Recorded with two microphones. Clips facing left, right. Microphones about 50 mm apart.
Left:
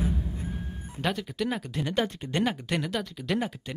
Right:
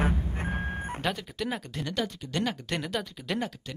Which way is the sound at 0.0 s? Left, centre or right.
Right.